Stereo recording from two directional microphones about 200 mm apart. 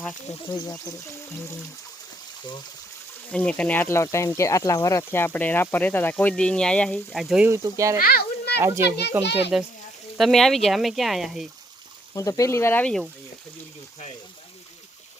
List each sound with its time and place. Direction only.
0.0 s speech: 15° left (ahead or behind)
3.3 s a child's voice: 5° left (ahead or behind); by 7.9 s 15° right (ahead or behind)
7.9 s children playing: 45° left (ahead or behind)
8.6 s a child's voice: 15° right (ahead or behind)
12.1 s speech: 15° left (ahead or behind)